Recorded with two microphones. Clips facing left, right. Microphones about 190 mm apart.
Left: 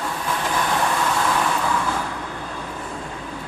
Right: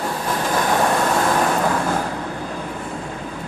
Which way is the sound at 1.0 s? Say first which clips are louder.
Right 4 dB; 45° right (ahead or behind).